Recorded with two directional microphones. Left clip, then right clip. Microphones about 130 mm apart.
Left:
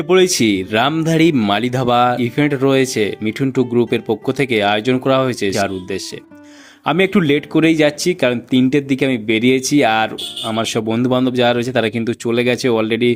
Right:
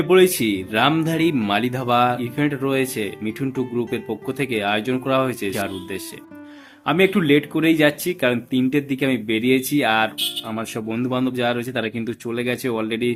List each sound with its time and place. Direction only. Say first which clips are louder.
0.1 s speech: left 3 dB; 50° left (ahead or behind)